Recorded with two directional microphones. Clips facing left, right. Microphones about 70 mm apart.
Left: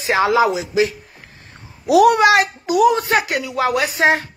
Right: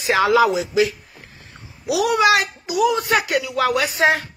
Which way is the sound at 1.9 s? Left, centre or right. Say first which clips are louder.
Left 5 dB; left.